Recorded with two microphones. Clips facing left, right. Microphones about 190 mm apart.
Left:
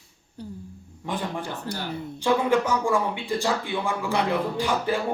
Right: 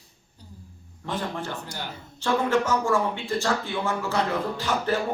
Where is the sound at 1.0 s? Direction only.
15° left (ahead or behind).